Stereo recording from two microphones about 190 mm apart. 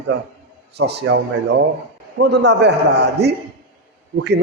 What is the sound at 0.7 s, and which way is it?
Speech, 60° right (ahead or behind).